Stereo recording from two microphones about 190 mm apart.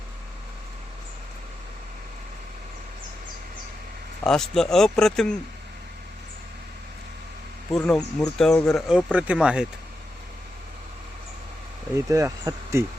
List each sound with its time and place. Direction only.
4.2 s speech: 5° left (ahead or behind)
7.7 s speech: 5° left (ahead or behind)
11.9 s speech: 15° right (ahead or behind)